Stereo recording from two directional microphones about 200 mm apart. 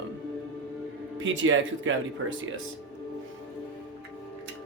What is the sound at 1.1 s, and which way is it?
Speech, 70° right (ahead or behind).